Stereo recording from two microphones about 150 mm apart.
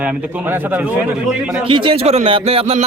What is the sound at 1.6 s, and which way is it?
Speech, 35° right (ahead or behind).